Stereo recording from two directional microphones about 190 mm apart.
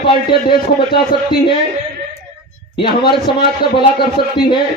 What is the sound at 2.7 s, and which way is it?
A man's voice, 25° left (ahead or behind).